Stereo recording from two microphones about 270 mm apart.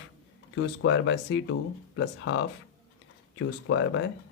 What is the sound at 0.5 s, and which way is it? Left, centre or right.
Speech, left.